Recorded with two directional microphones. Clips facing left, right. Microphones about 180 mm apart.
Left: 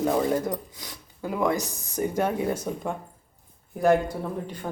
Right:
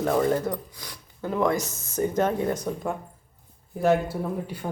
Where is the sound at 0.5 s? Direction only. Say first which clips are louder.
Left 1 dB; 20° left (ahead or behind).